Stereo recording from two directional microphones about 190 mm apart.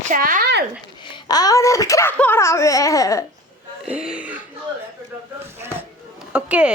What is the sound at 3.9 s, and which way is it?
Speech, 5° right (ahead or behind).